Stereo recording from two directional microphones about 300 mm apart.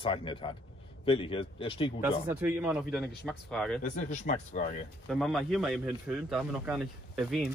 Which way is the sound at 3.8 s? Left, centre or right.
Left.